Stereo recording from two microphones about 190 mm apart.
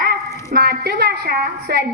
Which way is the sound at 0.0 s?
55° right (ahead or behind).